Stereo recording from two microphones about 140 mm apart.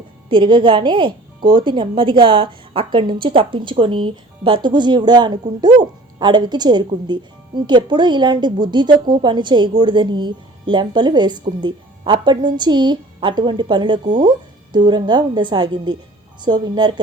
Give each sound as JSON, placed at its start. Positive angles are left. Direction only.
{"t": 0.3, "sound": "speech", "side_deg": -35}